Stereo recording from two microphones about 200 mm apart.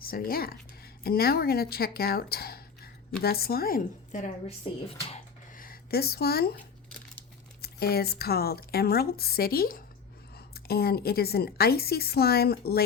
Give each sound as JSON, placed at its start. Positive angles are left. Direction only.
{"t": 0.0, "sound": "a woman's voice", "side_deg": 45}
{"t": 5.5, "sound": "a sound", "side_deg": 45}
{"t": 7.6, "sound": "a woman's voice", "side_deg": 50}